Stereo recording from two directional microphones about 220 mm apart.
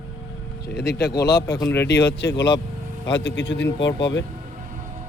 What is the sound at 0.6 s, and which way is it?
Speech, 45° left (ahead or behind).